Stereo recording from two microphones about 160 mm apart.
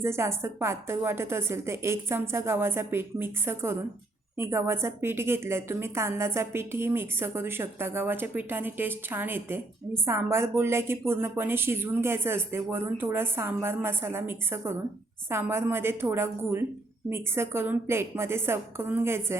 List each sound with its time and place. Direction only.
0.0 s a woman's voice: 15° right (ahead or behind)